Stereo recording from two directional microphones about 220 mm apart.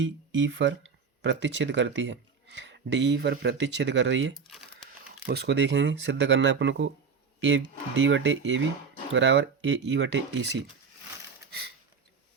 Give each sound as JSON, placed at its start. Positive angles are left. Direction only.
{"t": 0.0, "sound": "speech", "side_deg": -60}
{"t": 4.4, "sound": "crumpling", "side_deg": 0}
{"t": 5.2, "sound": "speech", "side_deg": -50}
{"t": 7.9, "sound": "speech", "side_deg": -55}